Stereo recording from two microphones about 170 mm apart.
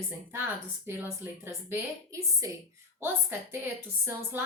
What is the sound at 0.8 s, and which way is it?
A woman's voice, 15° right (ahead or behind).